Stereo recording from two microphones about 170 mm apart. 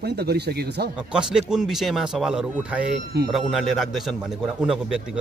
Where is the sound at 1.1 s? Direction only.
5° right (ahead or behind).